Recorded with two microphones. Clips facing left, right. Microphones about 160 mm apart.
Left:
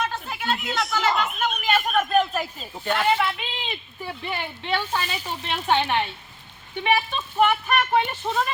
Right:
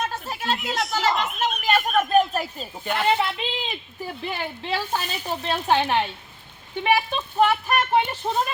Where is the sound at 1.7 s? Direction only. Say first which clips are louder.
Right 1 dB; centre (ahead or behind).